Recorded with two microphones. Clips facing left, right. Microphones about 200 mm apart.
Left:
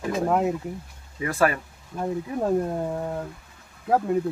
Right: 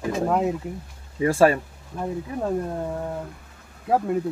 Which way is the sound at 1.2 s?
30° right (ahead or behind).